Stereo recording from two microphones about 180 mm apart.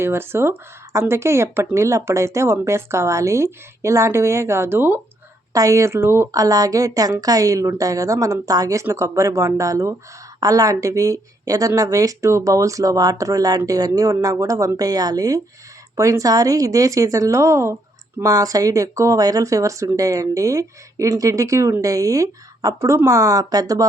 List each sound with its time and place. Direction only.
0.0 s a woman's voice: 15° right (ahead or behind)